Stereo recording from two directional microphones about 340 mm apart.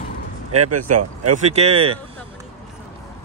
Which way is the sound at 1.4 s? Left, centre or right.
Centre.